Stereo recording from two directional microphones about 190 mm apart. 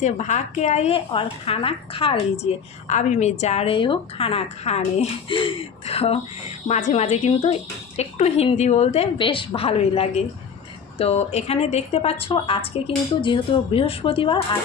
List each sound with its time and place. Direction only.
0.0 s a woman's voice: 40° left (ahead or behind)